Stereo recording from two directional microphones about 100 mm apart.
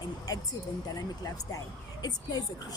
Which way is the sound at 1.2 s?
40° left (ahead or behind).